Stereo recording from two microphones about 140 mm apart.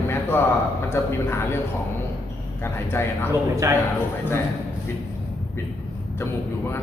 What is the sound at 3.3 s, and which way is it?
Speech, 25° right (ahead or behind).